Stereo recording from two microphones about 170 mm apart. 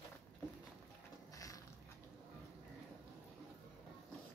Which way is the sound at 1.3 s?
20° left (ahead or behind).